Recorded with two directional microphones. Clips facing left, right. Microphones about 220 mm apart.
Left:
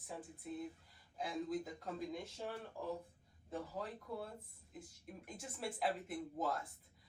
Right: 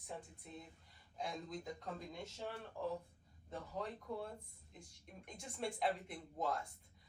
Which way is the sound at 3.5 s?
5° left (ahead or behind).